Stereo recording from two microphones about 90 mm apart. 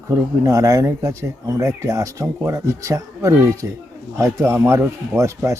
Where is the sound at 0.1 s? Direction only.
35° right (ahead or behind).